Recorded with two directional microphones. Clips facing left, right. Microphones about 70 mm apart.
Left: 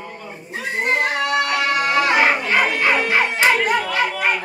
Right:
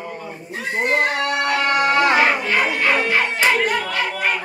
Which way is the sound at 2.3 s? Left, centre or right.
Centre.